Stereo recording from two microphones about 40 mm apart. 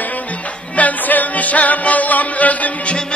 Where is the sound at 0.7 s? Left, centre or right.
Left.